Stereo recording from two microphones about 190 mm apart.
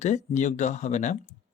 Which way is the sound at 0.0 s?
40° left (ahead or behind).